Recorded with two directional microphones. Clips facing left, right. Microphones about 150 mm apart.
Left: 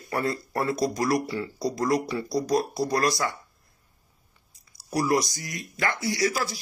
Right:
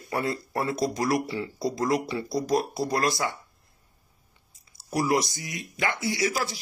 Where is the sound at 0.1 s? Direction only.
20° right (ahead or behind).